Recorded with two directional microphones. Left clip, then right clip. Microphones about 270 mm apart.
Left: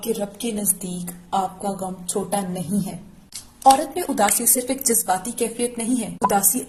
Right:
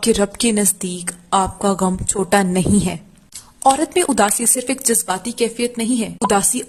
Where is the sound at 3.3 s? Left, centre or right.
Centre.